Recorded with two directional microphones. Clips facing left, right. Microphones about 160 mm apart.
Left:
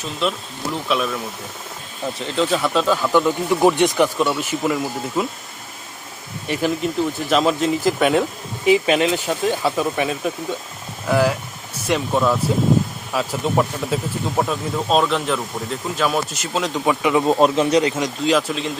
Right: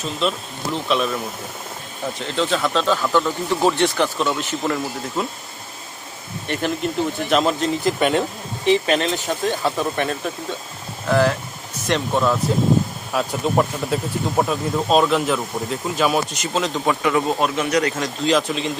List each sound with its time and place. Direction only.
0.9 s speech: centre (ahead or behind)
6.5 s speech: 5° left (ahead or behind); by 18.1 s 20° left (ahead or behind)
18.3 s speech: 5° left (ahead or behind)